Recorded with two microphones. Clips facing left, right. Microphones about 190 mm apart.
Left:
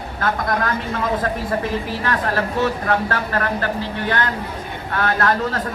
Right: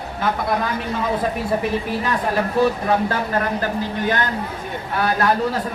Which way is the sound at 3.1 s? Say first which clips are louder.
Right 1 dB; 15° right (ahead or behind).